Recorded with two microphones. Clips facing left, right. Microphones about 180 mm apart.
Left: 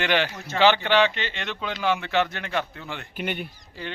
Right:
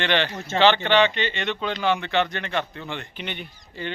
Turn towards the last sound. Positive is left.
turn(degrees=5)  # may be behind; listen again after turning